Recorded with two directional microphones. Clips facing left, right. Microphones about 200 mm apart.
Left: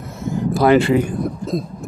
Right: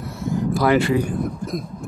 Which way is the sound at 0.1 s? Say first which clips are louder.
Left 2 dB; 25° left (ahead or behind).